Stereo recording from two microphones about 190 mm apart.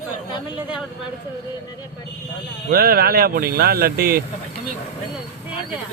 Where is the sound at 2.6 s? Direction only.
50° right (ahead or behind).